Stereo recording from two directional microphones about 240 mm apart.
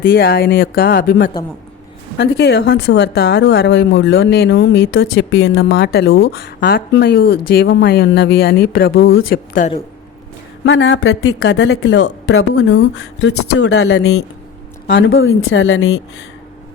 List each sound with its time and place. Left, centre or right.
0.0 s speech: left
6.3 s speech: left
10.7 s speech: left
14.8 s speech: left